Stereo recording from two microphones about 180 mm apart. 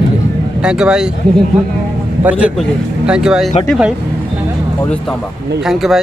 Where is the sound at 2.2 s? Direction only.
10° right (ahead or behind).